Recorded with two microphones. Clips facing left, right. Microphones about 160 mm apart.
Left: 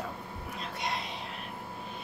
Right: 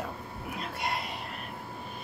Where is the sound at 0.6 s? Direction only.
5° right (ahead or behind).